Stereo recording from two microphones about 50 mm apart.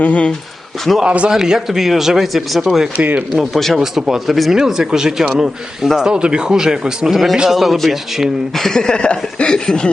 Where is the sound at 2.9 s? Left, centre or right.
Right.